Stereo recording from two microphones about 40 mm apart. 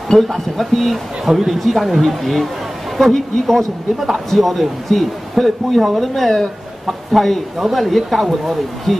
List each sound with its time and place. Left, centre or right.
0.3 s speech: centre